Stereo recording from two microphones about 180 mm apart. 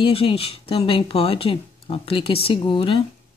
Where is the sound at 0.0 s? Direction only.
30° left (ahead or behind).